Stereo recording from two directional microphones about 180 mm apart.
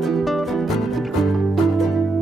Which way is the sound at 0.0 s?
Centre (ahead or behind).